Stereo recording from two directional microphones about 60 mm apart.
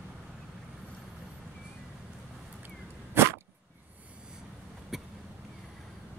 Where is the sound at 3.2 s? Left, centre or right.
Right.